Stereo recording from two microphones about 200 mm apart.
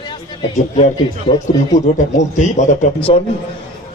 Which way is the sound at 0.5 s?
30° left (ahead or behind).